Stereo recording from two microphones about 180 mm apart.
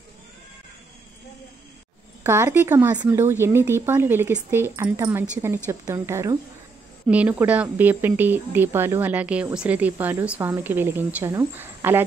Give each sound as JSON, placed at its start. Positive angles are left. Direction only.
{"t": 2.2, "sound": "speech", "side_deg": -15}